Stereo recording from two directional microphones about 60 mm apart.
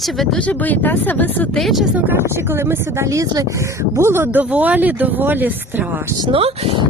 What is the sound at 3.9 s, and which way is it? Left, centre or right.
Speech, right.